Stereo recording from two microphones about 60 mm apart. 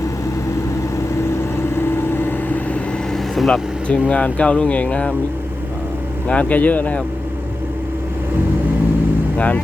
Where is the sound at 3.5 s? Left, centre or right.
Centre.